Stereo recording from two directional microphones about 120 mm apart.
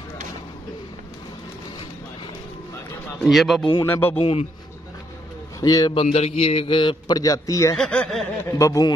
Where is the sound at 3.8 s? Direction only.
15° left (ahead or behind).